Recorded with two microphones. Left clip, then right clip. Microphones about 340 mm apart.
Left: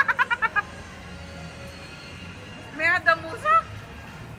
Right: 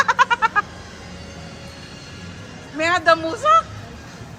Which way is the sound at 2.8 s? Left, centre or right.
Centre.